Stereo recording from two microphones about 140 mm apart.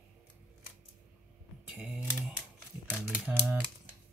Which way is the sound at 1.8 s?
5° right (ahead or behind).